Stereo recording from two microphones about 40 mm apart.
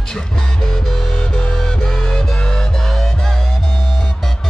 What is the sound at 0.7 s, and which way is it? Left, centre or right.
Music, centre.